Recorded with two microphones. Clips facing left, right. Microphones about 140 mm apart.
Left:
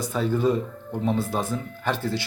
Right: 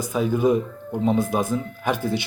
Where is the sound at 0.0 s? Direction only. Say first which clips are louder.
Right 2 dB; 10° right (ahead or behind).